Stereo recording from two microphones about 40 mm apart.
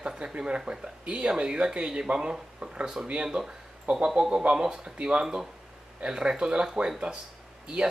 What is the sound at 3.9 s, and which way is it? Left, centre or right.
Speech, right.